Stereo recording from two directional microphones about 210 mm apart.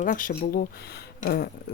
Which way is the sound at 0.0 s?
40° left (ahead or behind).